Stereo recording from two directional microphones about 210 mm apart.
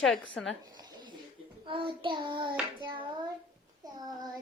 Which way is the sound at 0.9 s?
20° right (ahead or behind).